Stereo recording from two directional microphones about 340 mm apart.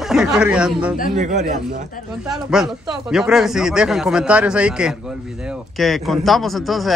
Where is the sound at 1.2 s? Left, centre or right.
Right.